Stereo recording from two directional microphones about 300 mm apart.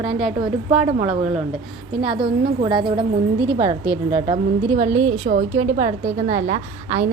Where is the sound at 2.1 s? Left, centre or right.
Centre.